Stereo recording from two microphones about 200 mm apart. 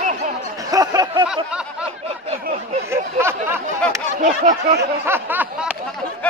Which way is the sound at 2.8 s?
10° right (ahead or behind).